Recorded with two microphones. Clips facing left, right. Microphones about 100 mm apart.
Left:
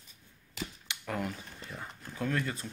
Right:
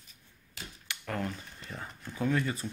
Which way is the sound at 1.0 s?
10° left (ahead or behind).